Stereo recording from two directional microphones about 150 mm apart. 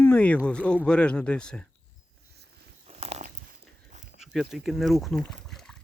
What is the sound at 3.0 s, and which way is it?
Dog, 45° right (ahead or behind).